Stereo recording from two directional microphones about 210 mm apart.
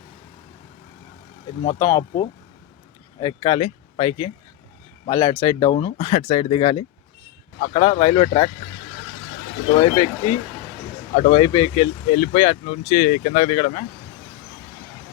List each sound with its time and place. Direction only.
1.6 s speech: 20° left (ahead or behind)
9.7 s speech: 25° left (ahead or behind)